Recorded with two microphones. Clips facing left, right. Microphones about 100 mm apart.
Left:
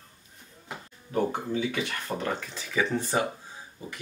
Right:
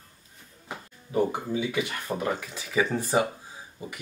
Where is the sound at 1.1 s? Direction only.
10° right (ahead or behind).